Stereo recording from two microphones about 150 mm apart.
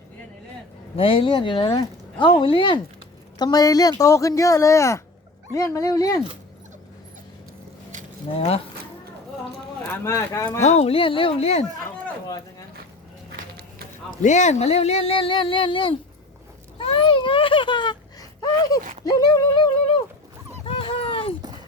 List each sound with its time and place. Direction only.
0.9 s speech: 40° left (ahead or behind)
8.4 s speech: 40° left (ahead or behind)
9.8 s speech: 15° left (ahead or behind)
10.6 s speech: 50° left (ahead or behind)
14.2 s speech: 55° left (ahead or behind); by 16.0 s 35° left (ahead or behind)
16.8 s a sound: 35° left (ahead or behind)
19.0 s speech: 25° left (ahead or behind)
20.7 s dog: 40° left (ahead or behind)